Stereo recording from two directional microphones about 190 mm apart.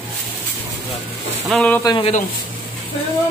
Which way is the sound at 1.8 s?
20° left (ahead or behind).